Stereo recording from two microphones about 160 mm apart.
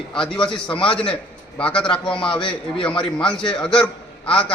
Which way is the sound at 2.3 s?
30° left (ahead or behind).